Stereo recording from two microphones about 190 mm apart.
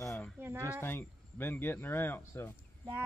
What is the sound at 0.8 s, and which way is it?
Speech, 10° left (ahead or behind).